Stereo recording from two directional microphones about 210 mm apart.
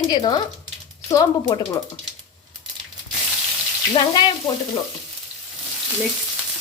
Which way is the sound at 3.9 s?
25° left (ahead or behind).